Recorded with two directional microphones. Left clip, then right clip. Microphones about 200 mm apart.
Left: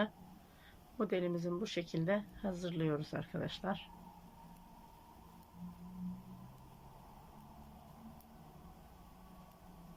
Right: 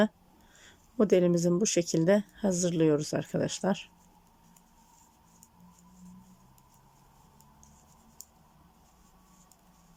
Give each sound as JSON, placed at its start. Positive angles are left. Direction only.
{"t": 0.6, "sound": "speech", "side_deg": -40}